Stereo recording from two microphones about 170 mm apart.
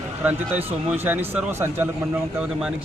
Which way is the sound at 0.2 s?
10° right (ahead or behind).